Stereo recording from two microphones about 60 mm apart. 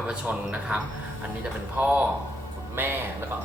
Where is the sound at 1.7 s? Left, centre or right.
Right.